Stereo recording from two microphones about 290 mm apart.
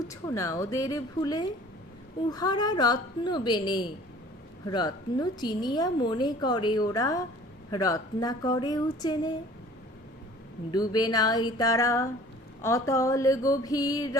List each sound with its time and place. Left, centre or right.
0.1 s a woman's voice: centre
10.7 s a woman's voice: centre